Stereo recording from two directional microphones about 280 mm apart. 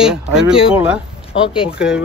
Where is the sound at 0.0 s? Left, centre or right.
Centre.